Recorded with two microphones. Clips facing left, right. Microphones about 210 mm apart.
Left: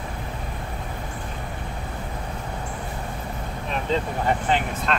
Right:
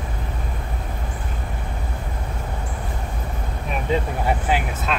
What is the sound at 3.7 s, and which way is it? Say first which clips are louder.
Speech: right 2 dB; 10° right (ahead or behind).